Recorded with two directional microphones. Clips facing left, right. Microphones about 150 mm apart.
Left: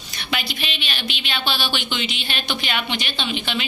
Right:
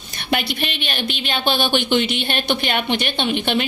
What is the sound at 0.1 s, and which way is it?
A woman's voice, 55° right (ahead or behind).